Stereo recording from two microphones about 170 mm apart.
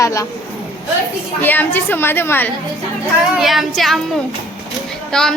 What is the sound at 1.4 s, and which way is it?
A child's voice, 10° left (ahead or behind).